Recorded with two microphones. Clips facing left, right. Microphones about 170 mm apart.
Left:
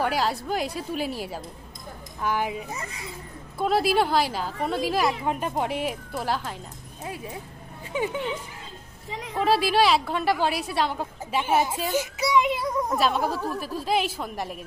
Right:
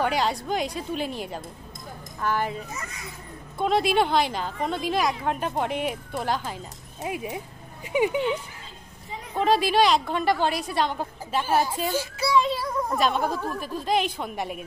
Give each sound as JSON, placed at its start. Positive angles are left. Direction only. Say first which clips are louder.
{"t": 0.0, "sound": "a woman's voice", "louder": "right 1 dB", "side_deg": 5}
{"t": 2.7, "sound": "speech", "louder": "left 2 dB", "side_deg": 30}
{"t": 3.5, "sound": "a woman's voice", "louder": "even", "side_deg": 5}
{"t": 7.0, "sound": "speech", "louder": "right 5 dB", "side_deg": -15}
{"t": 9.3, "sound": "a woman's voice", "louder": "right 1 dB", "side_deg": 5}
{"t": 11.9, "sound": "child singing", "louder": "left 1 dB", "side_deg": 20}
{"t": 12.9, "sound": "a woman's voice", "louder": "right 1 dB", "side_deg": 5}